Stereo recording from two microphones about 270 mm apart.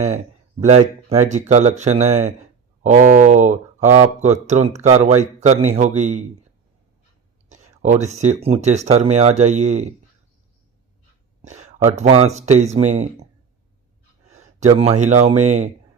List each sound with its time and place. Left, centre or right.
0.6 s speech: right
7.5 s speech: right
11.4 s speech: right
14.3 s speech: right